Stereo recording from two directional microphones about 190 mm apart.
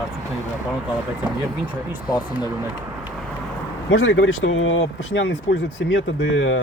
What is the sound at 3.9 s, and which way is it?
Speech, 80° left.